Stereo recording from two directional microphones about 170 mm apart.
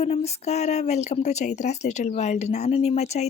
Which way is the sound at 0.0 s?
40° left (ahead or behind).